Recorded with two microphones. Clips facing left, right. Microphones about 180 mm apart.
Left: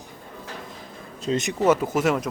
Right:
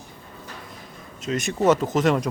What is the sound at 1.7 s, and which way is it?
Speech, 10° left (ahead or behind).